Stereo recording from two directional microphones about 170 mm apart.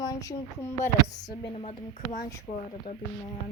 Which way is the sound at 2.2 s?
20° left (ahead or behind).